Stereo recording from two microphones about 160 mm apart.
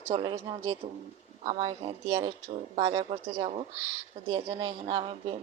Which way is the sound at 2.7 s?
40° right (ahead or behind).